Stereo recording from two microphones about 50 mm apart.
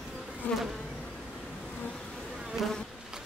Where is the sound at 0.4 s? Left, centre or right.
Left.